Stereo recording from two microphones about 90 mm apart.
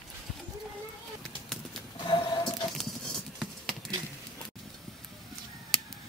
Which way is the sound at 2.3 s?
55° left (ahead or behind).